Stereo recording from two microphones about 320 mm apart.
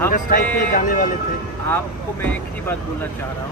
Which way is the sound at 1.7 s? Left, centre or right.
Centre.